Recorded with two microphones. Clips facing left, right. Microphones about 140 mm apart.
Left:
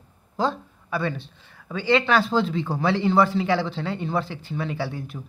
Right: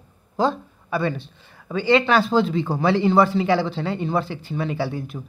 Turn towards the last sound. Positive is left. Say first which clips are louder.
# right 4 dB
turn(degrees=-5)  # may be behind; listen again after turning